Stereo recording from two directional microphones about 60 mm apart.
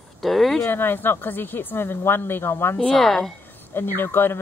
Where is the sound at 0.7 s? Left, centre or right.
Left.